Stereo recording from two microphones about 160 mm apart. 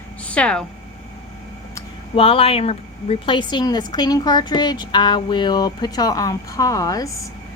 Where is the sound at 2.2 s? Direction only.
35° left (ahead or behind).